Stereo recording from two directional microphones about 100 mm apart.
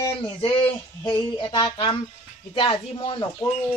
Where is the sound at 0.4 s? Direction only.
60° left (ahead or behind).